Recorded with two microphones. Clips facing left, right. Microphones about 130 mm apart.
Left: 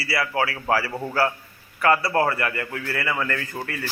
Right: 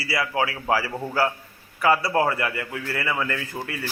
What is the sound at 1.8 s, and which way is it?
A man's voice, 10° right (ahead or behind).